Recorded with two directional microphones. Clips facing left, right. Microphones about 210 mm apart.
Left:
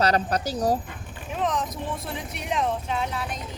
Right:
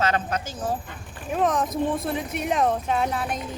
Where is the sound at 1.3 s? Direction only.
50° right (ahead or behind).